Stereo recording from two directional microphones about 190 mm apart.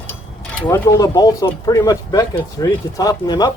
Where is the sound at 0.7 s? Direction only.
20° left (ahead or behind).